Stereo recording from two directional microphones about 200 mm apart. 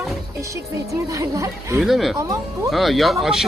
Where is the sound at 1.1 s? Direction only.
15° right (ahead or behind).